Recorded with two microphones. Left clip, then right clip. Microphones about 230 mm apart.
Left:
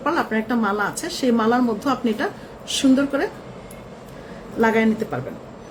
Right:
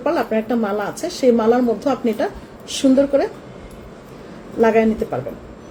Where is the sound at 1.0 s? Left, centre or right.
Centre.